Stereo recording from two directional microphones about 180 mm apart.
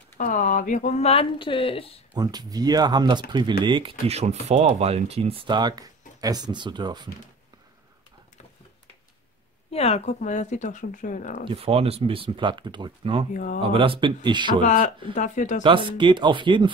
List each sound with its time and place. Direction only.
0.2 s speech: 45° left (ahead or behind); by 2.0 s 30° left (ahead or behind)
2.1 s speech: 20° right (ahead or behind)
4.1 s speech: 40° right (ahead or behind)
9.7 s speech: 35° left (ahead or behind)
11.4 s speech: 30° right (ahead or behind)
13.3 s speech: 45° left (ahead or behind)
13.6 s speech: 30° right (ahead or behind)
14.6 s speech: 45° left (ahead or behind)
15.6 s speech: 30° right (ahead or behind)